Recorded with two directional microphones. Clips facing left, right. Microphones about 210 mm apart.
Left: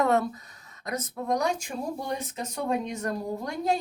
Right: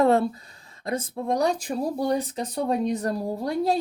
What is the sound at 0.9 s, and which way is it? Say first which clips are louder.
Speech: right 3 dB; 30° right (ahead or behind).